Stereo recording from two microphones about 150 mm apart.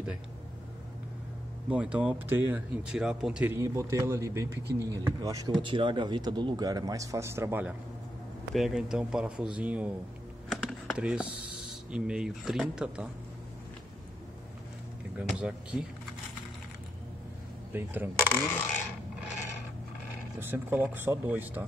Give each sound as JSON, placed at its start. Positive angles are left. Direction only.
{"t": 1.7, "sound": "speech", "side_deg": -10}
{"t": 3.5, "sound": "speech", "side_deg": -20}
{"t": 8.5, "sound": "speech", "side_deg": -5}
{"t": 10.5, "sound": "computer keyboard", "side_deg": 5}
{"t": 11.0, "sound": "speech", "side_deg": -5}
{"t": 15.1, "sound": "speech", "side_deg": -5}
{"t": 17.7, "sound": "speech", "side_deg": -10}
{"t": 20.3, "sound": "speech", "side_deg": -15}